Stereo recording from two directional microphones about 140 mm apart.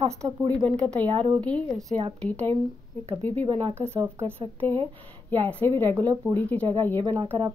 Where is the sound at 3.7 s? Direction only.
15° right (ahead or behind).